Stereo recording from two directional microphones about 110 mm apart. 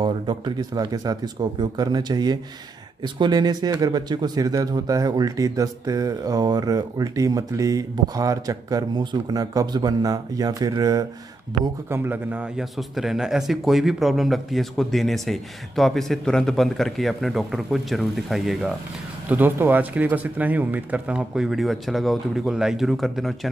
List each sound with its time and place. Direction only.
0.0 s speech: 40° right (ahead or behind)
11.9 s a man's voice: 20° right (ahead or behind)
12.5 s speech: centre (ahead or behind)
19.2 s speech: 15° right (ahead or behind); by 23.5 s centre (ahead or behind)